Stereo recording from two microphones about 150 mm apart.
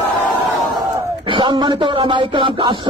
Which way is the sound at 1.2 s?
35° right (ahead or behind).